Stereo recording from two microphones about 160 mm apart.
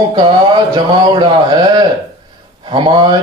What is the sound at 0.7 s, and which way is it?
Speech, 25° right (ahead or behind).